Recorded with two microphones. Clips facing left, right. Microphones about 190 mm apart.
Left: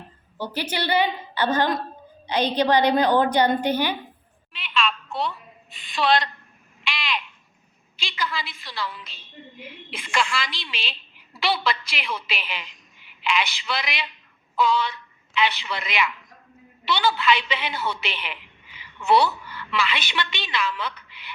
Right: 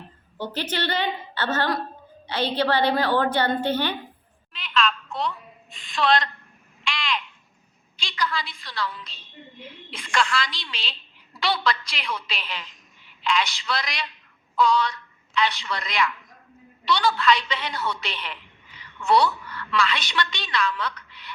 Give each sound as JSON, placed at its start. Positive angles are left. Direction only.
{"t": 0.3, "sound": "a woman's voice", "side_deg": 10}
{"t": 4.5, "sound": "a woman's voice", "side_deg": 0}
{"t": 6.8, "sound": "a sound", "side_deg": 5}
{"t": 9.6, "sound": "a woman's voice", "side_deg": 5}
{"t": 14.5, "sound": "a sound", "side_deg": 5}
{"t": 15.4, "sound": "a woman's voice", "side_deg": 5}
{"t": 19.1, "sound": "a woman's voice", "side_deg": 0}